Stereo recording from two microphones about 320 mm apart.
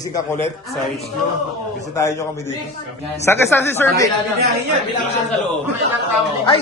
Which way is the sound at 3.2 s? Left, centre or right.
Centre.